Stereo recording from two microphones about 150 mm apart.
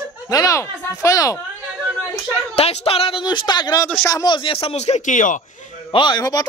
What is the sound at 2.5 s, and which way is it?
Speech, 40° left (ahead or behind).